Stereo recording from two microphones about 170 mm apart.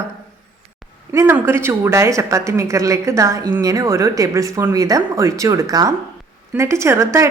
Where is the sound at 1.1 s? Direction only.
15° right (ahead or behind).